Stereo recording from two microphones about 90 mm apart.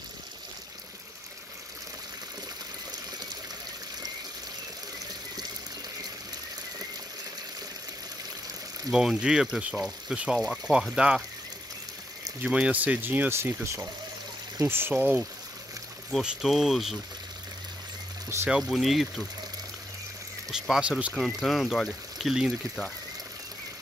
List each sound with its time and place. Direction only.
8.9 s speech: 10° right (ahead or behind)
12.4 s speech: 10° right (ahead or behind)
16.2 s speech: 5° right (ahead or behind)
18.5 s speech: centre (ahead or behind)
20.5 s speech: 5° right (ahead or behind)